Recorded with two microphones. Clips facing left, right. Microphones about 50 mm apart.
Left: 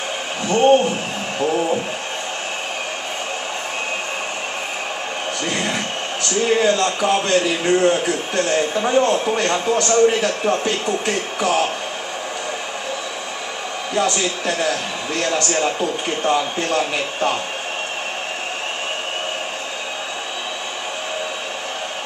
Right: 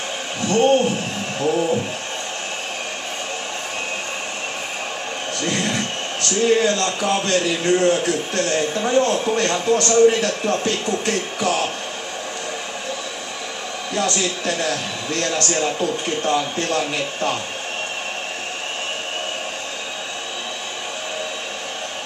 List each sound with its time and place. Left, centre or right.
0.5 s a man's voice: centre
5.4 s a sound: centre
6.4 s a man's voice: centre
13.9 s a man's voice: centre